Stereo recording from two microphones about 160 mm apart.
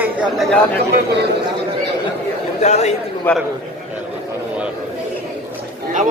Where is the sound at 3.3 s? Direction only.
10° left (ahead or behind).